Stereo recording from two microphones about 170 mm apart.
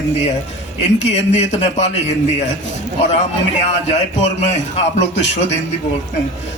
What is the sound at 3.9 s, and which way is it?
A man's voice, 40° left (ahead or behind).